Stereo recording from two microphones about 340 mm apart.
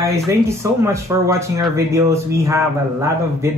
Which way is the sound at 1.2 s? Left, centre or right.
Centre.